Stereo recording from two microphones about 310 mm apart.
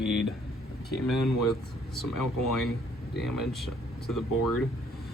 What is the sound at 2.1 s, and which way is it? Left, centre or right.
Speech, left.